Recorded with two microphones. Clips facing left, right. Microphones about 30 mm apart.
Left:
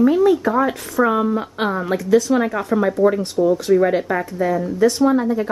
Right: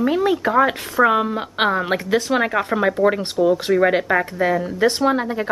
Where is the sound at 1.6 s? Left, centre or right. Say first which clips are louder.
Right 2 dB; right.